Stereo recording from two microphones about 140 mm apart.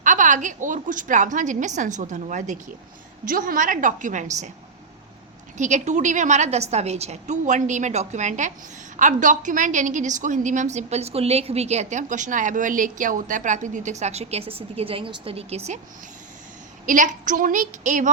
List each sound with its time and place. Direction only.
0.0 s a woman's voice: 65° right (ahead or behind)
3.2 s a woman's voice: 85° right; by 4.5 s 60° right (ahead or behind)
5.5 s a woman's voice: 55° right (ahead or behind)
16.8 s a woman's voice: 70° right (ahead or behind)